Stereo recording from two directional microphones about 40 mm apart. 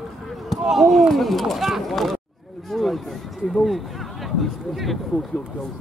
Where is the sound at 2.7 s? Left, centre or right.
Centre.